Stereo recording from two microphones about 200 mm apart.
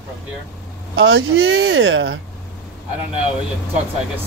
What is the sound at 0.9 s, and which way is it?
Speech, 75° right (ahead or behind).